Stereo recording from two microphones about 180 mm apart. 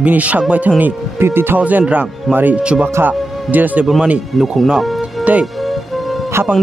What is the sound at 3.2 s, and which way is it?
Music, centre (ahead or behind).